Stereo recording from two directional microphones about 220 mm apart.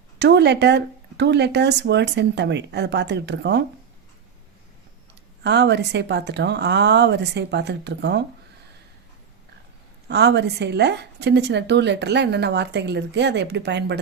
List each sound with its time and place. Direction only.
0.2 s a woman's voice: 50° right (ahead or behind)
5.4 s a woman's voice: 50° right (ahead or behind)
10.1 s a woman's voice: 50° right (ahead or behind)